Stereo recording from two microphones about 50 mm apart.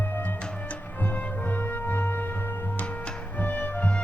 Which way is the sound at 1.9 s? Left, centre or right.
Left.